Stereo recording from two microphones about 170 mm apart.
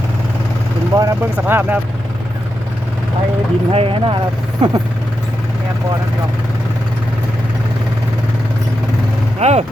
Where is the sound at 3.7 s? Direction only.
30° right (ahead or behind).